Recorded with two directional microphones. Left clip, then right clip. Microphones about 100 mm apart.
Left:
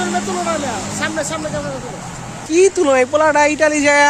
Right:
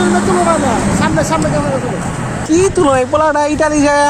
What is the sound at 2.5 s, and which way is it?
Speech, 20° left (ahead or behind).